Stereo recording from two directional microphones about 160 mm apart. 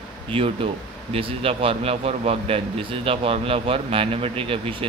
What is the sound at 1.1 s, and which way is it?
A man's voice, 35° right (ahead or behind).